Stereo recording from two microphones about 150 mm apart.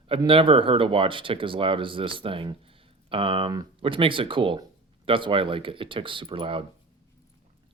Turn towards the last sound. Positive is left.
turn(degrees=-35)  # may be behind; listen again after turning